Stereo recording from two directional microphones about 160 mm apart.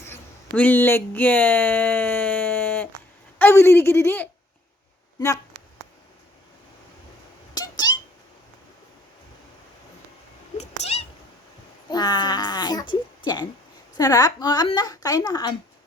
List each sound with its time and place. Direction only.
0.5 s speech: 10° left (ahead or behind)
7.5 s cat: 25° left (ahead or behind)
10.6 s cat: 40° left (ahead or behind)
11.9 s a woman's voice: 25° left (ahead or behind)